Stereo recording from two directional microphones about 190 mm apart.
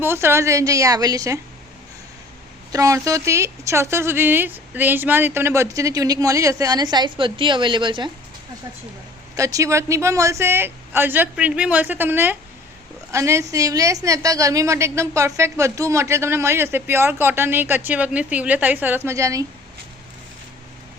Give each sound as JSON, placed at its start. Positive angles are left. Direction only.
{"t": 0.0, "sound": "a woman's voice", "side_deg": -10}
{"t": 2.7, "sound": "a woman's voice", "side_deg": -15}
{"t": 9.3, "sound": "a woman's voice", "side_deg": -15}